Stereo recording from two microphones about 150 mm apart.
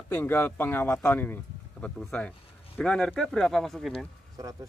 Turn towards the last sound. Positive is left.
turn(degrees=-25)  # may be behind; listen again after turning